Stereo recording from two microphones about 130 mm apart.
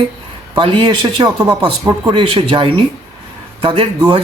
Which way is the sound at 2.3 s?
45° right (ahead or behind).